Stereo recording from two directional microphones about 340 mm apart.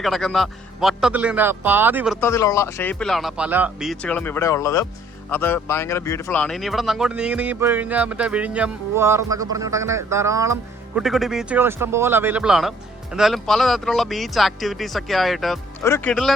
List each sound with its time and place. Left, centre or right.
0.0 s speech: centre
2.2 s speech: centre